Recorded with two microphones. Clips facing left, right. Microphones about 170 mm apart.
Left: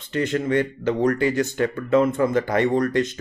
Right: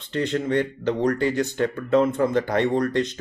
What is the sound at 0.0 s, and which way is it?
Speech, 5° left (ahead or behind).